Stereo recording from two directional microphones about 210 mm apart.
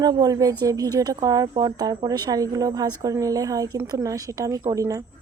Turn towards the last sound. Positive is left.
turn(degrees=-15)  # may be behind; listen again after turning